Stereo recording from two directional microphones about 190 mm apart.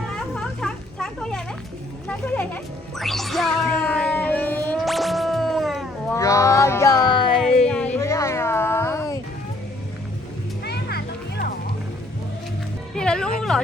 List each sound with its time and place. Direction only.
0.3 s a sound: 5° left (ahead or behind)
2.0 s speech: 10° left (ahead or behind)
3.0 s music: centre (ahead or behind)
6.1 s music: 15° left (ahead or behind)
7.7 s a sound: 5° left (ahead or behind)
10.7 s music: 60° left (ahead or behind)
12.9 s music: 5° left (ahead or behind)